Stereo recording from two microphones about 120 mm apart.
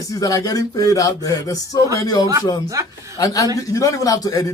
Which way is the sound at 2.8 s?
25° right (ahead or behind).